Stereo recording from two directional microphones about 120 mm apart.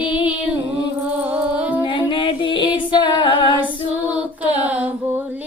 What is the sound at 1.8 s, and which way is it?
Music, 40° left (ahead or behind).